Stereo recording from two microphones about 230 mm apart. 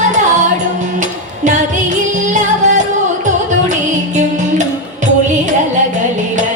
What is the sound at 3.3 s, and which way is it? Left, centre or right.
Music, right.